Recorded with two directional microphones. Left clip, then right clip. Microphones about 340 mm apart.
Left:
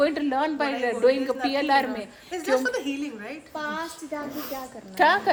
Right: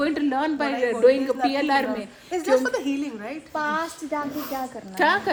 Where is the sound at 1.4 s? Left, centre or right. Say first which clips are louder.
Left 1 dB; centre.